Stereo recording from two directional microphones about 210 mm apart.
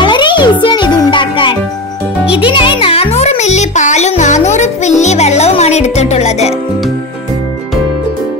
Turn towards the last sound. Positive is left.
turn(degrees=30)  # may be behind; listen again after turning